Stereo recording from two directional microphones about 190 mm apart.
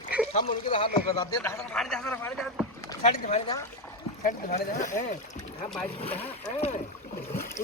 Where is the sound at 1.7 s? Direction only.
5° left (ahead or behind).